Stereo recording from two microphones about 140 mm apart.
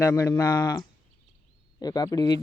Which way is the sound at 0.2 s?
30° left (ahead or behind).